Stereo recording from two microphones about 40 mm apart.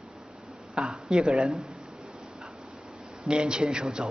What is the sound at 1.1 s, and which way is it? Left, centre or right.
Speech, right.